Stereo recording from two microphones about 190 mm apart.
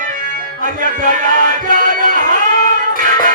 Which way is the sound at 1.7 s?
45° right (ahead or behind).